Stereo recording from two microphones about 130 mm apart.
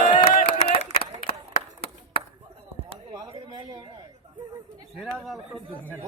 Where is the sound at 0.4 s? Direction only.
50° left (ahead or behind).